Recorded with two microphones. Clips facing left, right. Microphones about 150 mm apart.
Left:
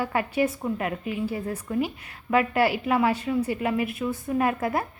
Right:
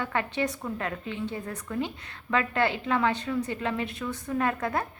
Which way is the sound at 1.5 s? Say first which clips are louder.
Left 5 dB; 30° left (ahead or behind).